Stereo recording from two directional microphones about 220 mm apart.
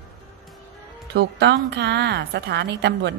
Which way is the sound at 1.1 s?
50° right (ahead or behind).